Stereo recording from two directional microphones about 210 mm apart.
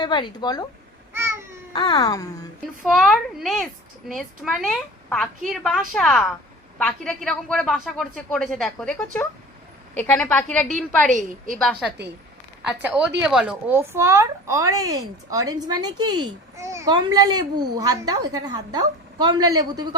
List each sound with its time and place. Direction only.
0.0 s speech: 20° left (ahead or behind)
1.1 s baby cry: 10° right (ahead or behind)
1.7 s a woman's voice: 25° left (ahead or behind)
2.8 s a woman's voice: centre (ahead or behind)
11.1 s a woman's voice: 40° right (ahead or behind)
11.5 s speech: centre (ahead or behind); by 20.0 s 20° right (ahead or behind)